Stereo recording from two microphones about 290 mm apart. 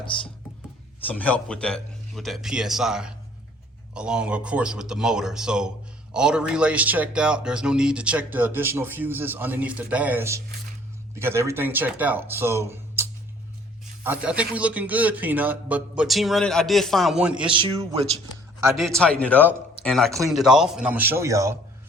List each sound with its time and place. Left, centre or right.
1.0 s speech: centre
17.5 s speech: centre
18.6 s speech: centre